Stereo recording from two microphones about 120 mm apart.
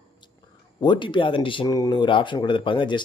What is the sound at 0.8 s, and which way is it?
Speech, 40° left (ahead or behind).